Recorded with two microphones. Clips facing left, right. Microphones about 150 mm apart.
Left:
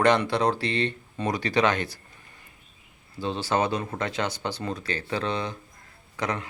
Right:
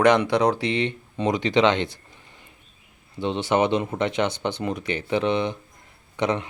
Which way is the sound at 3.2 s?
20° right (ahead or behind).